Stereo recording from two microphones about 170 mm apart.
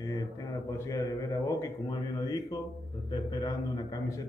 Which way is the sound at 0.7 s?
20° left (ahead or behind).